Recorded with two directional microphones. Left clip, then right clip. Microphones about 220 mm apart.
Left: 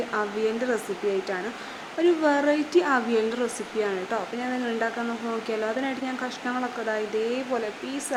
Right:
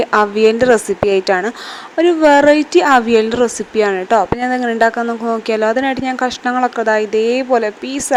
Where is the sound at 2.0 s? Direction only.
30° right (ahead or behind).